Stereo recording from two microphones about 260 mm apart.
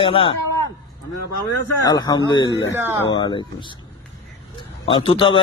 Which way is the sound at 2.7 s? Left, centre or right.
Centre.